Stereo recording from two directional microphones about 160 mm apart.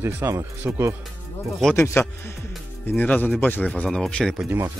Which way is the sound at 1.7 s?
15° left (ahead or behind).